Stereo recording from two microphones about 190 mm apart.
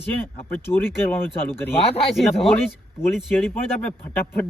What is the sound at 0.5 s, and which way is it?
Speech, 10° left (ahead or behind).